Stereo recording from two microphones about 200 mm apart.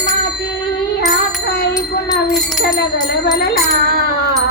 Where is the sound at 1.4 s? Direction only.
55° left (ahead or behind).